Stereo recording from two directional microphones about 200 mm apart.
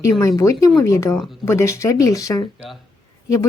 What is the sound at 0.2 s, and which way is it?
Speech, 15° left (ahead or behind).